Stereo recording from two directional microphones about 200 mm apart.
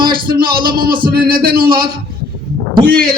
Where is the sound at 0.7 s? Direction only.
20° right (ahead or behind).